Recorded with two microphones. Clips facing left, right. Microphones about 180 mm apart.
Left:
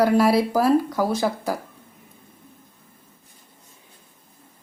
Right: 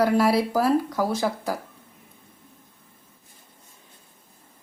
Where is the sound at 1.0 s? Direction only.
25° left (ahead or behind).